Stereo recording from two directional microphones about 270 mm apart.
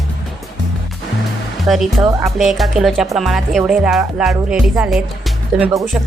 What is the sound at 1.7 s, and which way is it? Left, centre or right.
Speech, centre.